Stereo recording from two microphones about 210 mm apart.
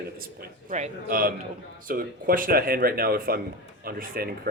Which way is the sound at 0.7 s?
40° right (ahead or behind).